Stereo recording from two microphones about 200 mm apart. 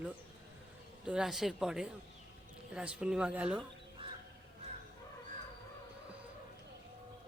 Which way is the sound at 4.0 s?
25° right (ahead or behind).